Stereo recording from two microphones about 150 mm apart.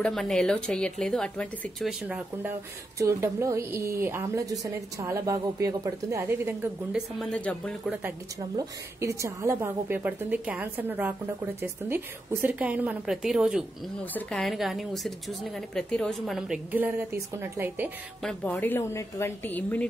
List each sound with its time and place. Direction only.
0.0 s a woman's voice: 5° left (ahead or behind)
1.9 s a woman's voice: 5° right (ahead or behind)
3.0 s a woman's voice: 20° right (ahead or behind)
7.2 s a woman's voice: 5° left (ahead or behind)
7.8 s a woman's voice: 10° right (ahead or behind)
8.5 s a woman's voice: 20° right (ahead or behind)
18.2 s speech: 10° left (ahead or behind)